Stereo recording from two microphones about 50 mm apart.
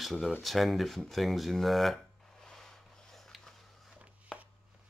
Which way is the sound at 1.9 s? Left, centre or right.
Centre.